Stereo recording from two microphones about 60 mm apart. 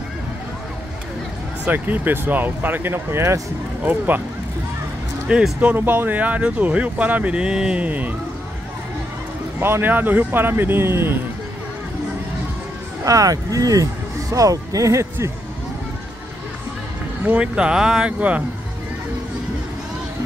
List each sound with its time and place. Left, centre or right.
1.7 s speech: right
3.8 s speech: right
5.6 s speech: right
9.6 s speech: right
13.0 s speech: right
17.4 s speech: centre